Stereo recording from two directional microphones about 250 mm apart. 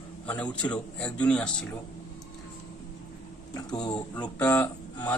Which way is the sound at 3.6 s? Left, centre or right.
Centre.